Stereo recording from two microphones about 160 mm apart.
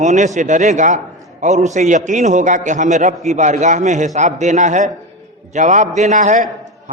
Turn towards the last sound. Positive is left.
turn(degrees=-50)  # may be behind; listen again after turning